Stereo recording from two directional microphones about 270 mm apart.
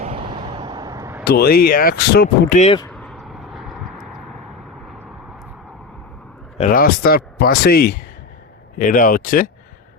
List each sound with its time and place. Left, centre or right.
0.0 s vehicle: right
1.2 s speech: left
2.9 s vehicle: centre
6.6 s speech: left